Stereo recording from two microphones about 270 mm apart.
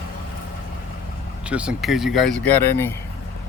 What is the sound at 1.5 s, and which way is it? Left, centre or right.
Speech, centre.